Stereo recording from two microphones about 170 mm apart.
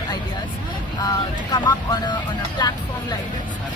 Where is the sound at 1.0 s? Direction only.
25° left (ahead or behind).